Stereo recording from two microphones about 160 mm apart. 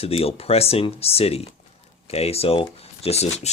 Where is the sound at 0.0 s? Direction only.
35° left (ahead or behind).